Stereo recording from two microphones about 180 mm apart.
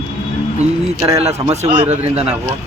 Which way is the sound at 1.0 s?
35° right (ahead or behind).